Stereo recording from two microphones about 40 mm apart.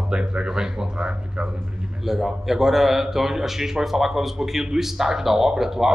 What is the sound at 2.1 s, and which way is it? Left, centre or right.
A man's voice, centre.